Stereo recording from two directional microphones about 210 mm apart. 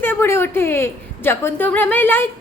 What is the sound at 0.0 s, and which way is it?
A woman's voice, 10° left (ahead or behind).